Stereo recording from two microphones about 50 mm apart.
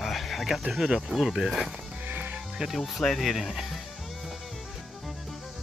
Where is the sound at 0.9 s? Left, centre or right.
Centre.